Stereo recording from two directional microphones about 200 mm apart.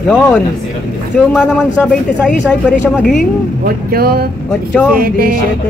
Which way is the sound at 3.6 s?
50° right (ahead or behind).